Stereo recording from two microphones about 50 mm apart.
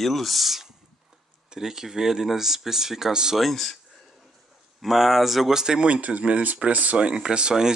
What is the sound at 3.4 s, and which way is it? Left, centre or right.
Speech, centre.